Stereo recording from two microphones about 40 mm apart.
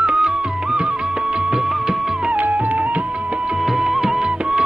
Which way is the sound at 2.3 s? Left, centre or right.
Right.